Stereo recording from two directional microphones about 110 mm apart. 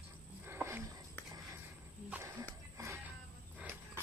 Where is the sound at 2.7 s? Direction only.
25° right (ahead or behind).